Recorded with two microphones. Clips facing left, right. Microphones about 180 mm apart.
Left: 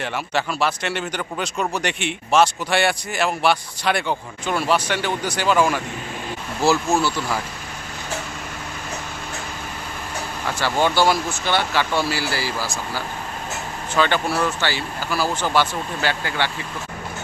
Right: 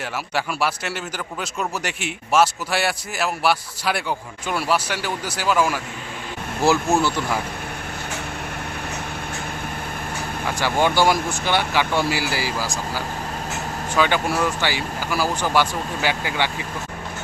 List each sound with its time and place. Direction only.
0.0 s a man's voice: 5° right (ahead or behind)
6.7 s speech: 20° right (ahead or behind)
10.6 s speech: 15° right (ahead or behind)